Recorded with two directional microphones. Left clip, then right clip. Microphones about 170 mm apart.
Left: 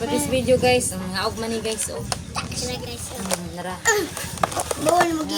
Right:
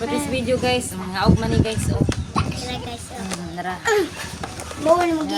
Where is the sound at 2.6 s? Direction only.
20° right (ahead or behind).